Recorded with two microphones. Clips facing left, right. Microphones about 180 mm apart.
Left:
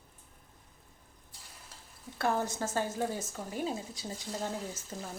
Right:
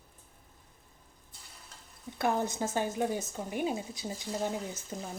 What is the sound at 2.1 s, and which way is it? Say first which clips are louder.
Speech: right 1 dB; 15° right (ahead or behind).